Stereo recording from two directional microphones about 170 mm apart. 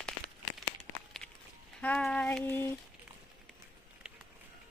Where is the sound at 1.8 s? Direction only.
5° left (ahead or behind).